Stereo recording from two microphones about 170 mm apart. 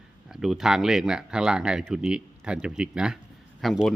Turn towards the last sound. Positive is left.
turn(degrees=0)  # may be behind; listen again after turning